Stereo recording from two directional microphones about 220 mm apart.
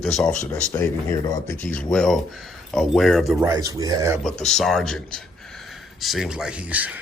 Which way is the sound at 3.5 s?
15° right (ahead or behind).